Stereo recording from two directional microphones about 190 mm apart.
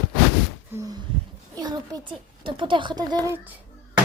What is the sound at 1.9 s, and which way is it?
A child's voice, 25° right (ahead or behind).